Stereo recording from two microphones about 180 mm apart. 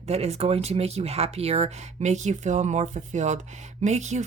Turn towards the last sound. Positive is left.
turn(degrees=-40)  # may be behind; listen again after turning